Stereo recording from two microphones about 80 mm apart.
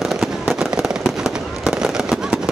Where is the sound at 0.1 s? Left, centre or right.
Centre.